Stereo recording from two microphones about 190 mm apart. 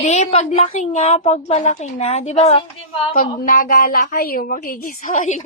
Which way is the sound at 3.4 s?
45° left (ahead or behind).